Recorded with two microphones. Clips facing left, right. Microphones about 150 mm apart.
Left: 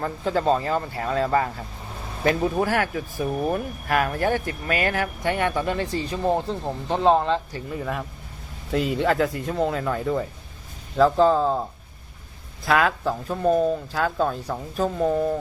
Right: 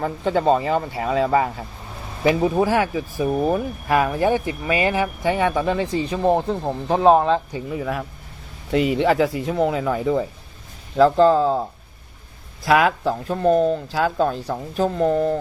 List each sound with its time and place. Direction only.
0.0 s speech: centre (ahead or behind); by 3.5 s 20° right (ahead or behind)
3.5 s speech: 10° right (ahead or behind)
6.8 s speech: 60° right (ahead or behind)
7.5 s speech: 5° right (ahead or behind)
8.7 s speech: 90° right
9.0 s speech: 5° right (ahead or behind)
12.6 s speech: 5° right (ahead or behind)